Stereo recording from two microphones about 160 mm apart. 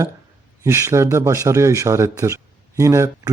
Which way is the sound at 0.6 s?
15° right (ahead or behind).